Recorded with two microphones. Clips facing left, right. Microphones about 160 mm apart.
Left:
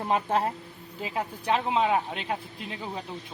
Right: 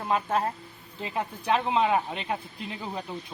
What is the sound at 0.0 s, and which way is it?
Speech, 25° left (ahead or behind).